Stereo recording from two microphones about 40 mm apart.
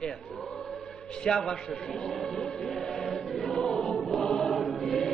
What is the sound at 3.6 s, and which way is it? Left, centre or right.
Choir, centre.